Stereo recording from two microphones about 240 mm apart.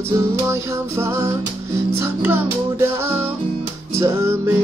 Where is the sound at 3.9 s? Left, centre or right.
Centre.